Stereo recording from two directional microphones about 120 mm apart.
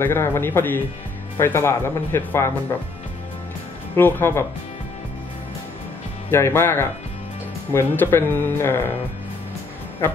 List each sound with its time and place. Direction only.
0.0 s speech: 20° left (ahead or behind)
3.9 s speech: 20° left (ahead or behind)
6.3 s speech: 20° left (ahead or behind)